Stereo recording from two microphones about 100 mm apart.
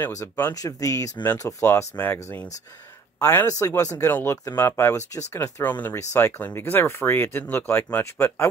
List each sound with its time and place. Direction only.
0.6 s speech: 35° left (ahead or behind)
3.4 s speech: 35° left (ahead or behind)
4.0 s speech: 25° left (ahead or behind)